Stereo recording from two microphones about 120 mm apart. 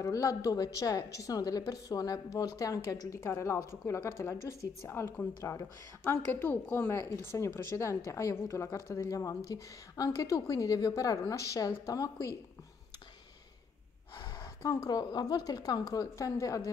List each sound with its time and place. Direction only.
0.0 s a woman's voice: 30° left (ahead or behind)
14.2 s a sound: 35° left (ahead or behind)
15.0 s a woman's voice: 35° left (ahead or behind)